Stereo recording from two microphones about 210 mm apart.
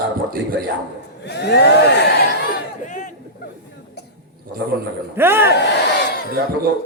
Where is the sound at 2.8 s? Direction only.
35° left (ahead or behind).